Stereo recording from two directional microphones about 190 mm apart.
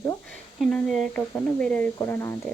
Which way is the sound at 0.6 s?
Centre (ahead or behind).